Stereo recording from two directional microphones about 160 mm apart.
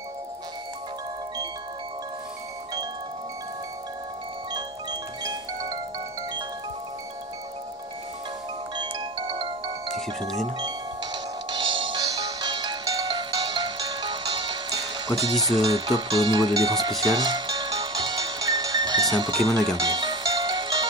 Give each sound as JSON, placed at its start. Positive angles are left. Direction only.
{"t": 5.2, "sound": "wind chime", "side_deg": -25}
{"t": 8.7, "sound": "ringtone", "side_deg": -30}
{"t": 9.9, "sound": "speech", "side_deg": 0}
{"t": 11.5, "sound": "music", "side_deg": -30}